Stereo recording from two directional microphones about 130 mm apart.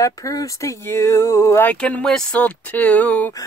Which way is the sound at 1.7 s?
10° left (ahead or behind).